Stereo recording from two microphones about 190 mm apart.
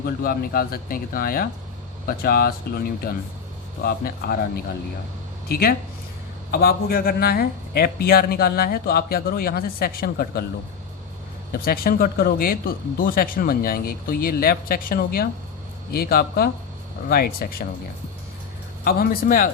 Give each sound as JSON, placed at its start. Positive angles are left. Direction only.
{"t": 0.0, "sound": "speech", "side_deg": 50}
{"t": 11.6, "sound": "speech", "side_deg": 50}
{"t": 18.9, "sound": "speech", "side_deg": 50}